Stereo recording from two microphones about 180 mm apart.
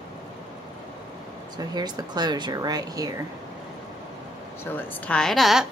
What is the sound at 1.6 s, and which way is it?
Speech, 20° right (ahead or behind).